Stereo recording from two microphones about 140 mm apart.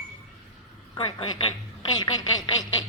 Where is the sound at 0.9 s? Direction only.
40° left (ahead or behind).